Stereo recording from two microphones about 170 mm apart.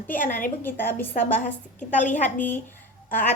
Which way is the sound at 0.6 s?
10° left (ahead or behind).